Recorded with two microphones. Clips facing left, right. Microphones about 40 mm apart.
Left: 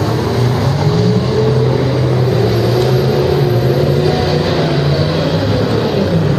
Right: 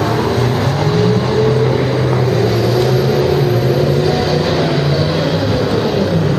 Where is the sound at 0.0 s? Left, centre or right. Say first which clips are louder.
Right 1 dB; right.